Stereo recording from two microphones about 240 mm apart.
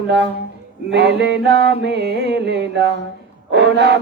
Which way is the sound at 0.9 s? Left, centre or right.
Right.